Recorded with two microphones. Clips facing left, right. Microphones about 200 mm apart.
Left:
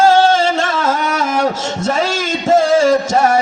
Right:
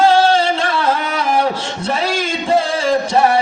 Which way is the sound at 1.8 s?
45° left (ahead or behind).